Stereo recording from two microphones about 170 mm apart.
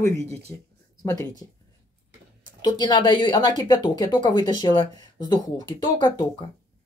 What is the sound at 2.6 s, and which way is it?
A woman's voice, 25° left (ahead or behind).